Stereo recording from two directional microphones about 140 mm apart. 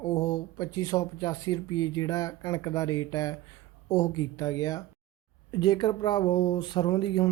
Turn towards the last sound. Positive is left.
turn(degrees=35)  # may be behind; listen again after turning